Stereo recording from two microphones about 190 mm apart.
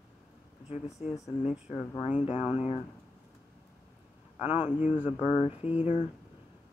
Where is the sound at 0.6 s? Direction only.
35° left (ahead or behind).